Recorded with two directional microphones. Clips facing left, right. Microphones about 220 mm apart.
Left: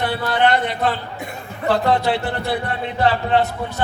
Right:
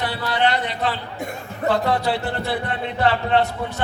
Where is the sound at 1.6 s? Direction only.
30° left (ahead or behind).